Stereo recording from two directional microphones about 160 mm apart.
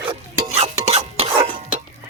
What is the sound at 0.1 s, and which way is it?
Stir, 40° right (ahead or behind).